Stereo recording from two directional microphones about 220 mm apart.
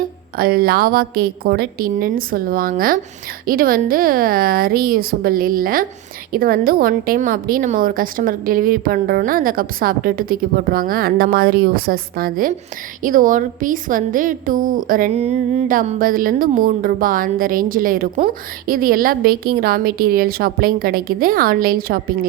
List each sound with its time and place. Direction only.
0.3 s a woman's voice: 45° right (ahead or behind)